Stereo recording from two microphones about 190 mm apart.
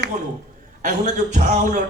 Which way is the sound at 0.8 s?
40° right (ahead or behind).